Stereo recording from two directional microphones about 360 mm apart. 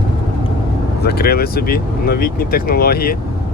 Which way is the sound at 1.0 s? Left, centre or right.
Left.